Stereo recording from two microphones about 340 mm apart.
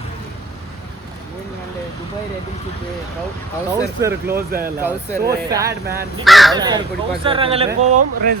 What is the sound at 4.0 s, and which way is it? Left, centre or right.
Speech, centre.